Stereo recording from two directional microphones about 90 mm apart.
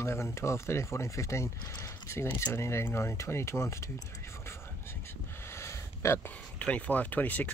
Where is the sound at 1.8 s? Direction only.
30° left (ahead or behind).